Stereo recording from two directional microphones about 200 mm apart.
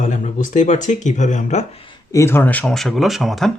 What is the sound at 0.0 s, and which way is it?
Speech, 35° left (ahead or behind).